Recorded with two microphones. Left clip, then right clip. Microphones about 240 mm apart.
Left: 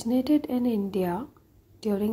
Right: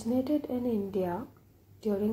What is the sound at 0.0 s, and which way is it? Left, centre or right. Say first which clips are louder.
Speech: left 5 dB; left.